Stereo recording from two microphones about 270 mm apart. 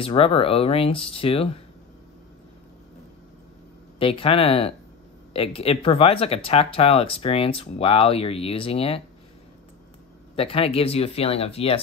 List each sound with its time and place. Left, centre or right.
0.0 s speech: left
4.0 s speech: left
10.3 s speech: left